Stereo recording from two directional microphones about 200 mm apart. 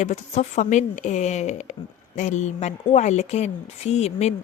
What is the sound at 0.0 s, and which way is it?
Speech, 35° left (ahead or behind).